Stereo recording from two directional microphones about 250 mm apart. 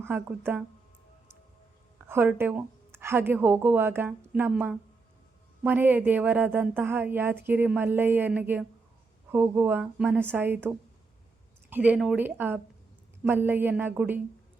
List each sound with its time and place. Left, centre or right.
0.0 s a woman's voice: centre
2.0 s a woman's voice: centre